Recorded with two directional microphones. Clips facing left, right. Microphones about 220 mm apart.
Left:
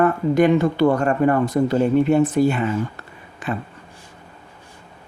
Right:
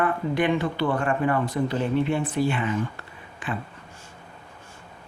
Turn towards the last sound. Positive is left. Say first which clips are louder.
# left 5 dB
turn(degrees=40)  # may be behind; listen again after turning